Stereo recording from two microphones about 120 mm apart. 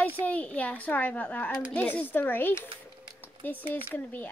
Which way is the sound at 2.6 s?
40° right (ahead or behind).